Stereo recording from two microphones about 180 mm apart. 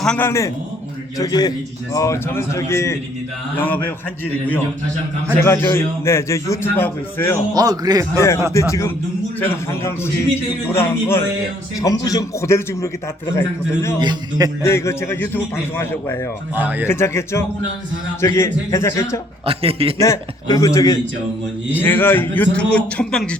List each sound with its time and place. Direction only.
0.0 s a man's voice: 10° left (ahead or behind)
5.4 s a man's voice: 15° left (ahead or behind)
7.5 s a man's voice: 20° right (ahead or behind)
8.1 s a man's voice: 15° left (ahead or behind)
14.0 s a man's voice: 20° right (ahead or behind)
14.6 s a man's voice: 15° left (ahead or behind)
16.6 s speech: 10° right (ahead or behind)
16.8 s a man's voice: 15° left (ahead or behind)
19.5 s a man's voice: 30° right (ahead or behind)
20.0 s a man's voice: 15° left (ahead or behind)